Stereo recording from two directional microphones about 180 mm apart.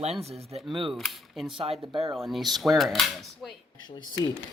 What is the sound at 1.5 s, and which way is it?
Speech, 30° right (ahead or behind).